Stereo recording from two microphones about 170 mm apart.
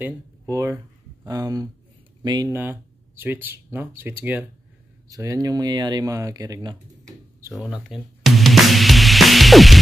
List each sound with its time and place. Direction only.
0.0 s speech: 20° right (ahead or behind)
2.5 s speech: 10° right (ahead or behind)
7.5 s music: centre (ahead or behind)